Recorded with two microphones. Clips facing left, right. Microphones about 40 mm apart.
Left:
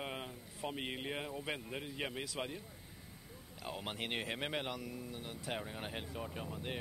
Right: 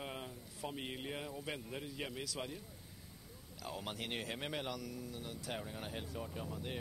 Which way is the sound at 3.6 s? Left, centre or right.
Left.